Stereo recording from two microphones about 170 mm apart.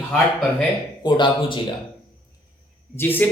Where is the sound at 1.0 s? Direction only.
25° left (ahead or behind).